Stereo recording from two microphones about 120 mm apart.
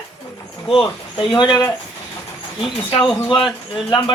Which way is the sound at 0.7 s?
45° left (ahead or behind).